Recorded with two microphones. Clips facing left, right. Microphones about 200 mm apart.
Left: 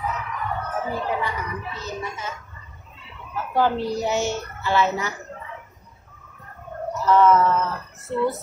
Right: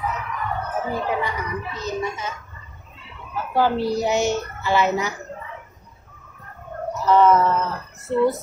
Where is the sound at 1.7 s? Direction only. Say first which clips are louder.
Right 5 dB; 20° right (ahead or behind).